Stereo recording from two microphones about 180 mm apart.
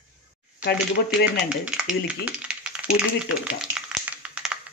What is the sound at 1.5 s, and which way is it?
Speech, 5° right (ahead or behind).